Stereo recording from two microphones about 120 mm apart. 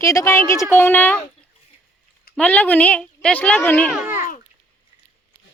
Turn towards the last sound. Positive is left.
turn(degrees=-20)  # may be behind; listen again after turning